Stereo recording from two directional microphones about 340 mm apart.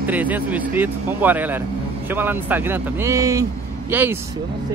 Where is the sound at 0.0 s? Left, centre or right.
Centre.